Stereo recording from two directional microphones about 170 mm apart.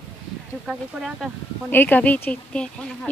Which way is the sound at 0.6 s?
Centre (ahead or behind).